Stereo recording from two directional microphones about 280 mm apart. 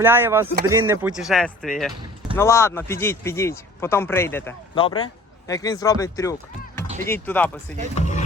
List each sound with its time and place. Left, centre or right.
0.0 s speech: centre
4.8 s speech: centre
7.9 s speech: left